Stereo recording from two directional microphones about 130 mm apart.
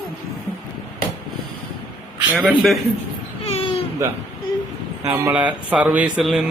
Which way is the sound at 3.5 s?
50° left (ahead or behind).